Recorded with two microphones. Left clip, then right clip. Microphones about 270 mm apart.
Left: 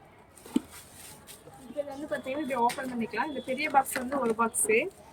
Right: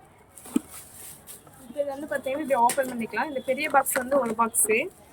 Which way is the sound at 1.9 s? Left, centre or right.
Centre.